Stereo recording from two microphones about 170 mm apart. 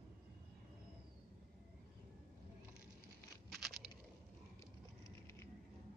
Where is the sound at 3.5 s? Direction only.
Centre (ahead or behind).